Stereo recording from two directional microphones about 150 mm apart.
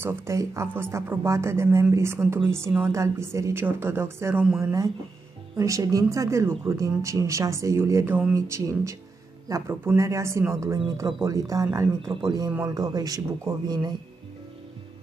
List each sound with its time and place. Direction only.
0.0 s speech: 15° right (ahead or behind)